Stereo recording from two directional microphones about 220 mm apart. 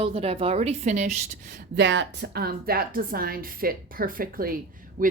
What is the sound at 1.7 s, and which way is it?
A woman's voice, 55° right (ahead or behind).